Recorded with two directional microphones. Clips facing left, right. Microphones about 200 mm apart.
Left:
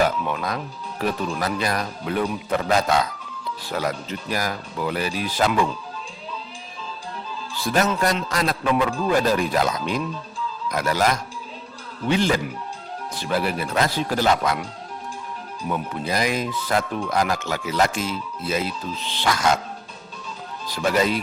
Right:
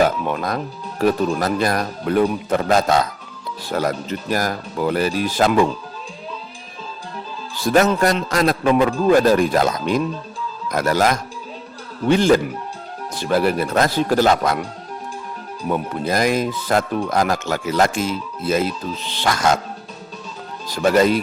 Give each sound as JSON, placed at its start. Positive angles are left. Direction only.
{"t": 0.0, "sound": "speech", "side_deg": -45}
{"t": 7.6, "sound": "speech", "side_deg": -45}
{"t": 15.7, "sound": "speech", "side_deg": -45}
{"t": 20.7, "sound": "speech", "side_deg": -50}